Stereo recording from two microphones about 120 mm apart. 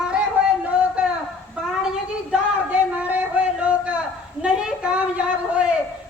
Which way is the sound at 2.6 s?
15° right (ahead or behind).